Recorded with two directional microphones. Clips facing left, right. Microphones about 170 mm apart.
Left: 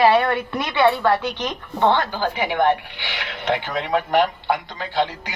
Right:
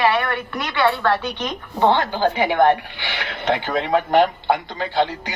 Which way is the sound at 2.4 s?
35° right (ahead or behind).